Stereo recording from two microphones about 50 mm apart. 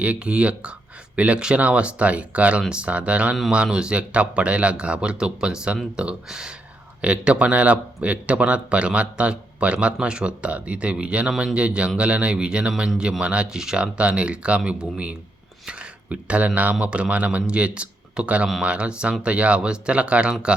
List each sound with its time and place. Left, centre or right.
0.0 s speech: right
7.0 s speech: right
13.8 s speech: right